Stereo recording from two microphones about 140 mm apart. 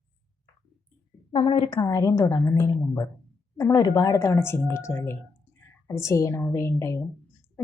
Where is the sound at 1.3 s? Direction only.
40° left (ahead or behind).